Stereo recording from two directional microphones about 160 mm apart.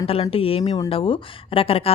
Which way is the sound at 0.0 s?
35° left (ahead or behind).